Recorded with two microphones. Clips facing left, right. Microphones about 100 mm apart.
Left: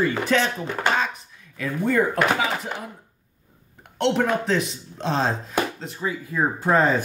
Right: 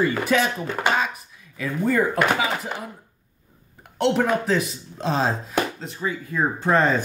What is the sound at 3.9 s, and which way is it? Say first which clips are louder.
Speech: right 1 dB; 5° right (ahead or behind).